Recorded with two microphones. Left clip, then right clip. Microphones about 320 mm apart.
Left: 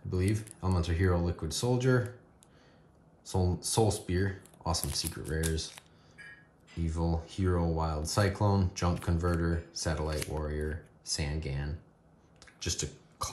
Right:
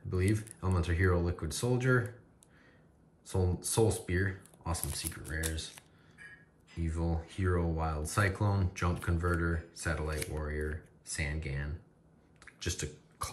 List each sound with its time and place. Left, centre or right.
0.1 s speech: centre
3.3 s speech: centre
12.4 s a sound: centre